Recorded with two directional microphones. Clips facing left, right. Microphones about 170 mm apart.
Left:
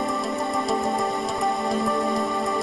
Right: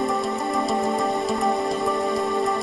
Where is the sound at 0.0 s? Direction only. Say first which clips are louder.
Right 2 dB; centre (ahead or behind).